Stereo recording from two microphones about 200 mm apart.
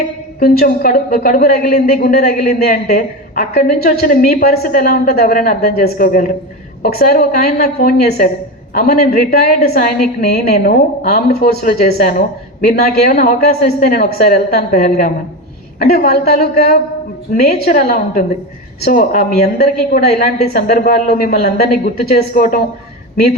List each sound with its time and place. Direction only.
0.3 s a woman's voice: 50° left (ahead or behind)